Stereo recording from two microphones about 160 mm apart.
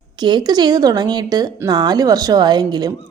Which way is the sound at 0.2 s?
30° right (ahead or behind).